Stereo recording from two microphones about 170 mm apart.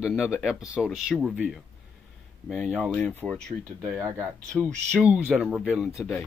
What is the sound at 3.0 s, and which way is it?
Speech, 10° left (ahead or behind).